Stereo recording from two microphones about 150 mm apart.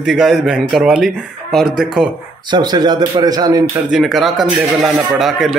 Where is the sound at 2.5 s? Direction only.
30° right (ahead or behind).